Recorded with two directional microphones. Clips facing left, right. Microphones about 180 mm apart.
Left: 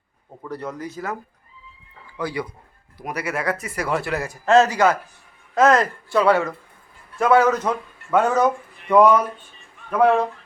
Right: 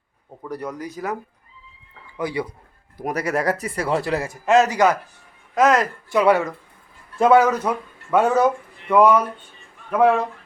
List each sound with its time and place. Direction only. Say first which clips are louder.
0.4 s speech: right 1 dB; 15° right (ahead or behind)
3.0 s speech: right 4 dB; 45° right (ahead or behind); by 4.4 s 30° right (ahead or behind)
4.4 s speech: left 1 dB; 15° right (ahead or behind)